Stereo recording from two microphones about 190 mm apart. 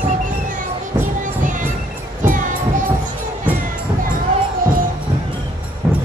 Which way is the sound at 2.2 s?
45° right (ahead or behind).